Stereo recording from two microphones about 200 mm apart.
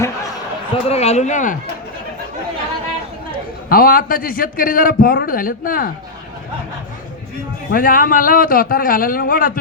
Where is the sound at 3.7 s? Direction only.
45° left (ahead or behind).